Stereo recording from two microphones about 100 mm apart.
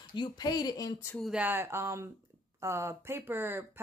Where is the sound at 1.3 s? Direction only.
15° right (ahead or behind).